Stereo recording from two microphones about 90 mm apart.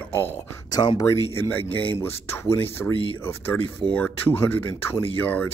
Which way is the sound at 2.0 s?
25° left (ahead or behind).